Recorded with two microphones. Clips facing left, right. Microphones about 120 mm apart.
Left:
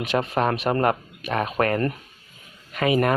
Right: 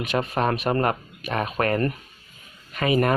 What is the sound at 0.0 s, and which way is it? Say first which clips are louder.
Speech: left 1 dB; 20° left (ahead or behind).